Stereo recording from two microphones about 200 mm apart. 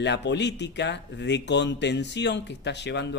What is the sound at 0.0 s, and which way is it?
Speech, 60° left (ahead or behind).